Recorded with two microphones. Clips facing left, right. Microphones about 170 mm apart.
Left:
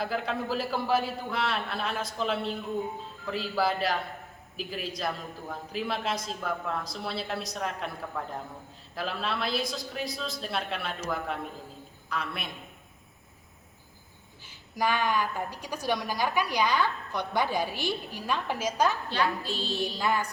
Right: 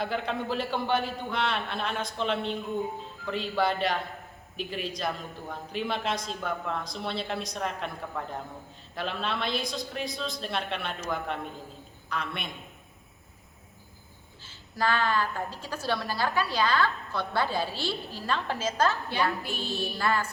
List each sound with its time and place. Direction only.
0.0 s a man's voice: centre (ahead or behind)
14.4 s a woman's voice: 15° left (ahead or behind)
19.4 s a woman's voice: 15° right (ahead or behind)
20.0 s a woman's voice: 15° left (ahead or behind)